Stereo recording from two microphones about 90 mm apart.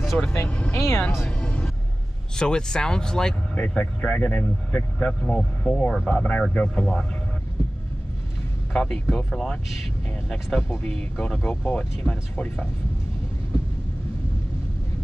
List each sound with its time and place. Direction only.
0.3 s speech: 10° left (ahead or behind)
0.7 s speech: 30° left (ahead or behind)
1.2 s music: 15° left (ahead or behind)
2.3 s speech: 10° left (ahead or behind)
8.7 s speech: 10° left (ahead or behind)